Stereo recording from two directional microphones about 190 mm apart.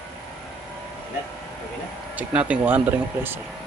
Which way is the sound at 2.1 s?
5° right (ahead or behind).